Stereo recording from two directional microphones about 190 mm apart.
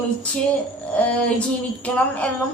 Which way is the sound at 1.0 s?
5° left (ahead or behind).